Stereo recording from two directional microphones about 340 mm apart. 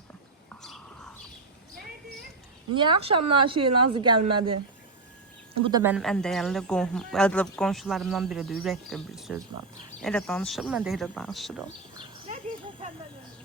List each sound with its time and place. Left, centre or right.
0.6 s bird: centre
2.7 s speech: centre
3.6 s a woman's voice: right
5.6 s speech: centre